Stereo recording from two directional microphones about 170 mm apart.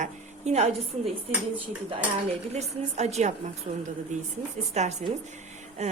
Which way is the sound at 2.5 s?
40° right (ahead or behind).